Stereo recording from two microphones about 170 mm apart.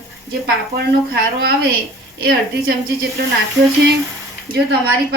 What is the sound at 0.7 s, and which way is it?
A woman's voice, 70° right (ahead or behind).